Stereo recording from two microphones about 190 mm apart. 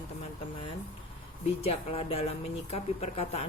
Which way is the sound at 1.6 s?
30° left (ahead or behind).